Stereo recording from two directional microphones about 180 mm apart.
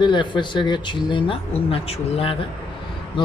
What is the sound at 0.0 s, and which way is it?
Speech, 25° left (ahead or behind).